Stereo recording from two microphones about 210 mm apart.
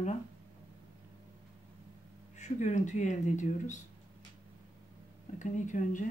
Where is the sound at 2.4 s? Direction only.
35° left (ahead or behind).